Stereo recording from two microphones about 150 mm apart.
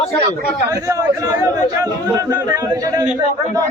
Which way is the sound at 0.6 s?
25° right (ahead or behind).